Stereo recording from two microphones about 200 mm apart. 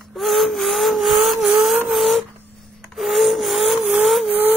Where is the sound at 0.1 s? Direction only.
Centre (ahead or behind).